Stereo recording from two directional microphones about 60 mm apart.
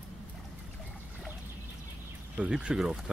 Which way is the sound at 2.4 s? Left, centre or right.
Centre.